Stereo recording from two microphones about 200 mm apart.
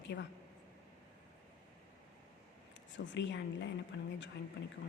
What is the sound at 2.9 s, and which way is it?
A woman's voice, 60° left (ahead or behind).